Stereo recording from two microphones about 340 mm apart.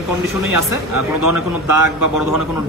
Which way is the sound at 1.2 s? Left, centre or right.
Right.